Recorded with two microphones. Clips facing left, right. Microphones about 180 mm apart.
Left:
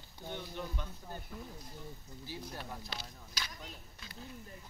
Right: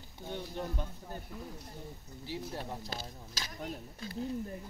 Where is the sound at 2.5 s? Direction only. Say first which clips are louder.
Right 5 dB; 30° right (ahead or behind).